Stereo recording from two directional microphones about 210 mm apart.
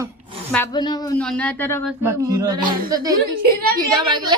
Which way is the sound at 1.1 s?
5° left (ahead or behind).